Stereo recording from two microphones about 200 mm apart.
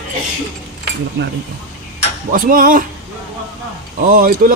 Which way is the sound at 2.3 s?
45° right (ahead or behind).